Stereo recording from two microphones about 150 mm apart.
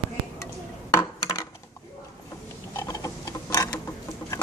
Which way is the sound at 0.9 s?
25° left (ahead or behind).